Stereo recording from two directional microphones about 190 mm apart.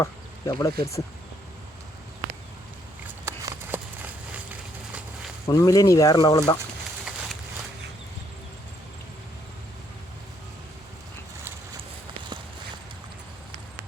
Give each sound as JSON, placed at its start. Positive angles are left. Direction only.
{"t": 0.0, "sound": "speech", "side_deg": 15}
{"t": 3.2, "sound": "a sound", "side_deg": -15}
{"t": 5.5, "sound": "speech", "side_deg": 20}